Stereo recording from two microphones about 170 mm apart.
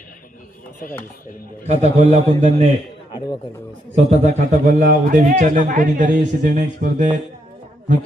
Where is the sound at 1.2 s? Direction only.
55° left (ahead or behind).